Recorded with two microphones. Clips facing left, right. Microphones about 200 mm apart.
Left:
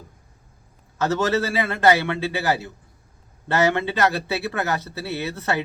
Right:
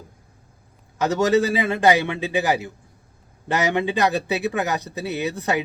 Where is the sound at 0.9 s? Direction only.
15° right (ahead or behind).